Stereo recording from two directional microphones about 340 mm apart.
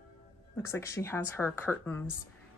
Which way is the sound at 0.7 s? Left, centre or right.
Centre.